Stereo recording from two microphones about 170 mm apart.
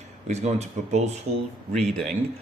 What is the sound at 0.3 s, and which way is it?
Speech, 40° right (ahead or behind).